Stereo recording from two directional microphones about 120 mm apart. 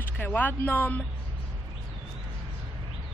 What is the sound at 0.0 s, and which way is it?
Speech, 15° left (ahead or behind).